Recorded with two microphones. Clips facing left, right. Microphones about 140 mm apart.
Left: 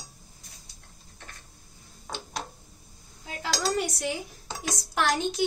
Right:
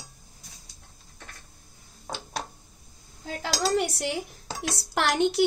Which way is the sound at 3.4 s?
70° right (ahead or behind).